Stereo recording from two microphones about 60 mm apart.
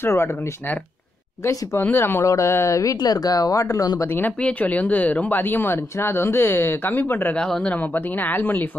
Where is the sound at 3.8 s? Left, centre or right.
Left.